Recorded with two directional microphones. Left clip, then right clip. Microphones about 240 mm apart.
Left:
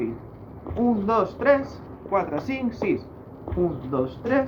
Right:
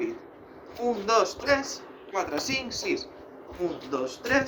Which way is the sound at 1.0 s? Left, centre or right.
Right.